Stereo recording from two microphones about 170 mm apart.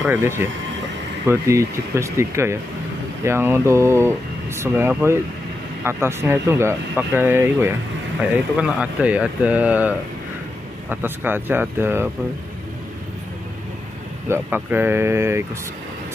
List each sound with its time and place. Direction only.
0.0 s speech: 10° right (ahead or behind)
14.3 s speech: 10° right (ahead or behind)